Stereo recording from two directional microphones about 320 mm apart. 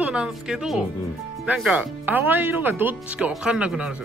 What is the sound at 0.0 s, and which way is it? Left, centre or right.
Speech, centre.